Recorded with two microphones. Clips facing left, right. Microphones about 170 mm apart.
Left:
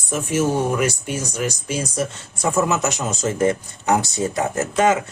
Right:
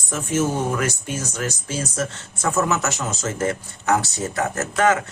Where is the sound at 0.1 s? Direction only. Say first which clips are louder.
Left 2 dB; 10° left (ahead or behind).